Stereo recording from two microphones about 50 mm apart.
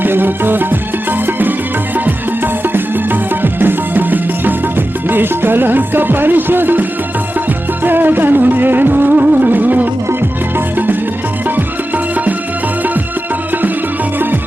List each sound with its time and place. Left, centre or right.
0.0 s music: right
2.7 s music: right
7.9 s music: right